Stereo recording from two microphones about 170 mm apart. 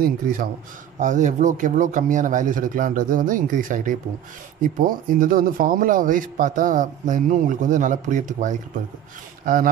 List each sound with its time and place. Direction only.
0.0 s a man's voice: 55° right (ahead or behind)
0.9 s speech: 45° right (ahead or behind)